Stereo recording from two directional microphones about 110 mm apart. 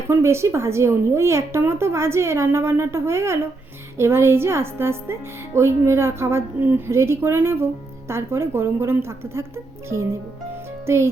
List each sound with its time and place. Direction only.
0.1 s a woman's voice: 25° right (ahead or behind)